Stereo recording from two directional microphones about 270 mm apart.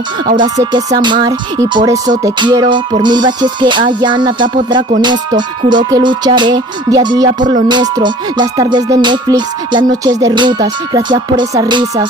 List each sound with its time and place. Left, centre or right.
0.4 s speech: centre